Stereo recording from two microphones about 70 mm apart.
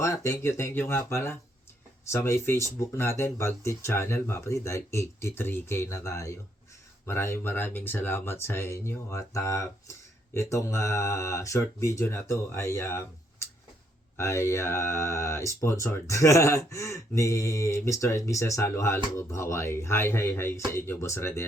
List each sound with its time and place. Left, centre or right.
0.0 s speech: left
6.0 s speech: left
7.1 s speech: left